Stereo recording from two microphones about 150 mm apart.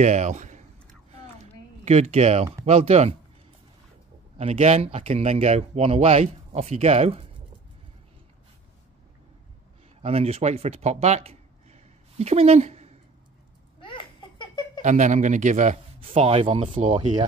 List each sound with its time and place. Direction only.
0.0 s speech: 50° right (ahead or behind)
1.9 s speech: 45° right (ahead or behind)
4.4 s speech: 45° right (ahead or behind)
10.0 s speech: 40° right (ahead or behind)
13.7 s laughter: 35° left (ahead or behind)
14.8 s a man's voice: 55° right (ahead or behind)
16.1 s speech: 40° right (ahead or behind)
16.9 s speech: 30° right (ahead or behind)